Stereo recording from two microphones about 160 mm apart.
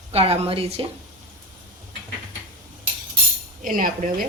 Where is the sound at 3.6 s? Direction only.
60° right (ahead or behind).